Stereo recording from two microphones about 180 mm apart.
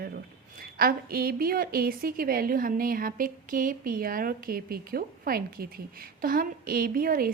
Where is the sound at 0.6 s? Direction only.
55° right (ahead or behind).